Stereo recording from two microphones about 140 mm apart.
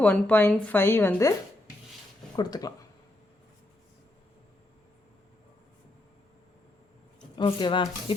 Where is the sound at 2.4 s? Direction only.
30° left (ahead or behind).